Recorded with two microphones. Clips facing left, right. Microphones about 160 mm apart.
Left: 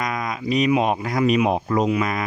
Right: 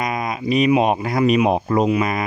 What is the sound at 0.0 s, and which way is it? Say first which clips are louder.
Speech: right 3 dB; 20° right (ahead or behind).